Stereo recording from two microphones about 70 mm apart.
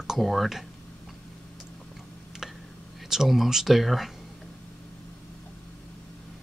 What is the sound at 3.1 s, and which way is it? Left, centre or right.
Speech, centre.